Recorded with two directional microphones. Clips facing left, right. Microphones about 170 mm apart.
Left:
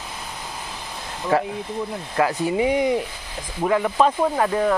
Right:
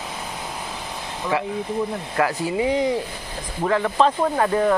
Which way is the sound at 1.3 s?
45° left (ahead or behind).